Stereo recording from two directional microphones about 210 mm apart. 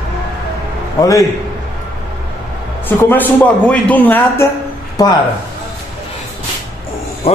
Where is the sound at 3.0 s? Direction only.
10° left (ahead or behind).